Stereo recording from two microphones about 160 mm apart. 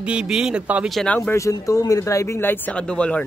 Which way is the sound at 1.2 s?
15° left (ahead or behind).